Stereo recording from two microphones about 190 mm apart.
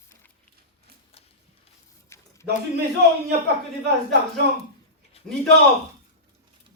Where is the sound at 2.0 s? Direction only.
15° left (ahead or behind).